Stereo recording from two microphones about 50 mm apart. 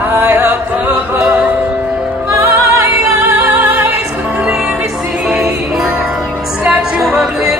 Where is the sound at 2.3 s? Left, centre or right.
Right.